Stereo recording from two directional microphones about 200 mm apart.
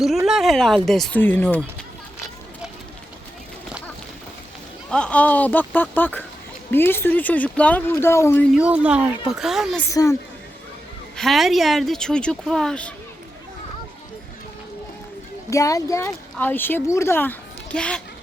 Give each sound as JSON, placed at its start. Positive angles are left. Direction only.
{"t": 0.3, "sound": "speech", "side_deg": 0}
{"t": 4.9, "sound": "speech", "side_deg": 5}
{"t": 8.5, "sound": "speech", "side_deg": -5}
{"t": 9.9, "sound": "speech", "side_deg": 15}
{"t": 11.2, "sound": "speech", "side_deg": 0}
{"t": 15.4, "sound": "speech", "side_deg": 15}